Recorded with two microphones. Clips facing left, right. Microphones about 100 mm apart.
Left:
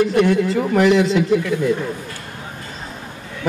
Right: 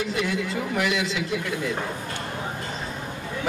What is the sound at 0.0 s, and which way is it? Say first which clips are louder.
A man's voice: left 11 dB; 50° left (ahead or behind).